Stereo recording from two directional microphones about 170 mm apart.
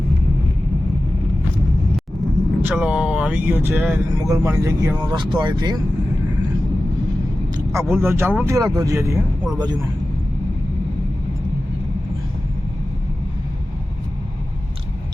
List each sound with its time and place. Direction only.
2.6 s speech: 5° right (ahead or behind); by 5.7 s 25° right (ahead or behind)
7.7 s speech: 15° right (ahead or behind)